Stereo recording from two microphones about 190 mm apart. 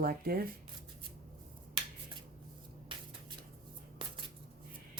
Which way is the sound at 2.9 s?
25° right (ahead or behind).